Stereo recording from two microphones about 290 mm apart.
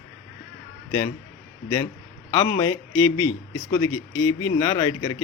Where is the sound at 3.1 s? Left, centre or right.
Left.